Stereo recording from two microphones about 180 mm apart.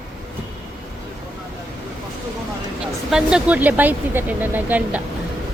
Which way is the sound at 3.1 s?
5° right (ahead or behind).